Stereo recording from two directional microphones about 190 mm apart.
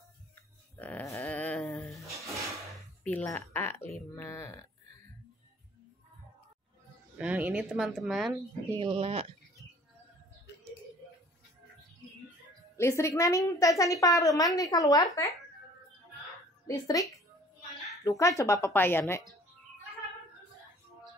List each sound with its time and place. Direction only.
0.7 s a sound: 10° left (ahead or behind)
3.0 s a sound: 10° left (ahead or behind)
4.1 s a woman's voice: 15° left (ahead or behind)
7.2 s speech: 10° right (ahead or behind)
8.7 s speech: 25° right (ahead or behind)
12.7 s a woman's voice: 15° left (ahead or behind)
16.6 s a woman's voice: 20° left (ahead or behind)